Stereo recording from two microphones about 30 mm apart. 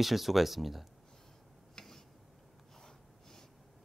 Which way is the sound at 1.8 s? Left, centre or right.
Left.